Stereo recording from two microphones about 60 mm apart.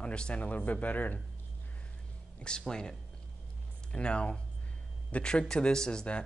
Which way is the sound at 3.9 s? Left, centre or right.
Centre.